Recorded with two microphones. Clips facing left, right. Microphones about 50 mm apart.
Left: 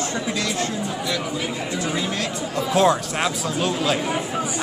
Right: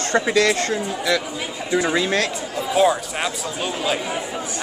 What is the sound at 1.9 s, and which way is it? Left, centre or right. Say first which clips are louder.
Speech: right 5 dB; right.